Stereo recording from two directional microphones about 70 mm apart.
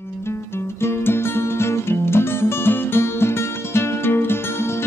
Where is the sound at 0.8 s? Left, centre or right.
Left.